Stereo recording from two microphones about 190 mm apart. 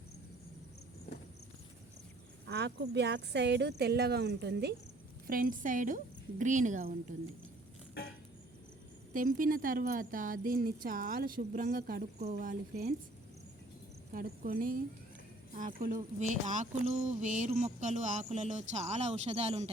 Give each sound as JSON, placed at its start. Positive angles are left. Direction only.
{"t": 2.5, "sound": "speech", "side_deg": -65}
{"t": 5.2, "sound": "speech", "side_deg": -45}
{"t": 9.1, "sound": "speech", "side_deg": -45}
{"t": 14.1, "sound": "speech", "side_deg": -50}